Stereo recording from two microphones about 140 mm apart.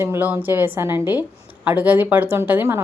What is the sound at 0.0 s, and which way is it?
A woman's voice, 15° right (ahead or behind).